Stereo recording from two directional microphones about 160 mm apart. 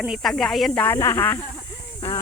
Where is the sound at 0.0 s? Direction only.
Centre (ahead or behind); by 1.4 s 15° left (ahead or behind).